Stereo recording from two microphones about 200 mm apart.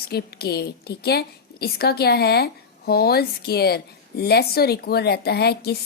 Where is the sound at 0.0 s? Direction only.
50° left (ahead or behind).